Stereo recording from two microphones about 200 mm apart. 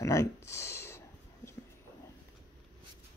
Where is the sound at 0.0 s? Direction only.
15° left (ahead or behind).